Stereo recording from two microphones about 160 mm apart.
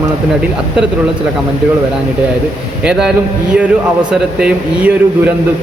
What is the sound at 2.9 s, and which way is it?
Speech, 5° right (ahead or behind).